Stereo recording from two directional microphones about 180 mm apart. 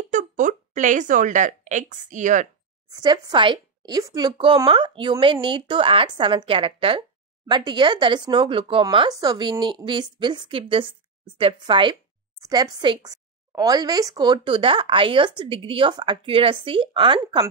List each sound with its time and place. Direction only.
0.1 s speech: 45° right (ahead or behind)
2.9 s speech: 25° right (ahead or behind)